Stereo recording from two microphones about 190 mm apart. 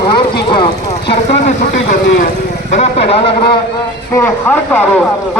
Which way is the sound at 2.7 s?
35° left (ahead or behind).